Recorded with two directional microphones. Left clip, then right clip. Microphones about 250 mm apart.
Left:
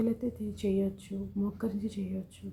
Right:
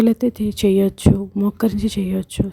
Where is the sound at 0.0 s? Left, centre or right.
Right.